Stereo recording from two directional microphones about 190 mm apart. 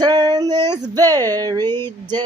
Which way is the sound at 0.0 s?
20° right (ahead or behind).